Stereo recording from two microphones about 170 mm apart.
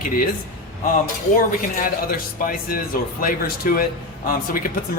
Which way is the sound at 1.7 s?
55° left (ahead or behind).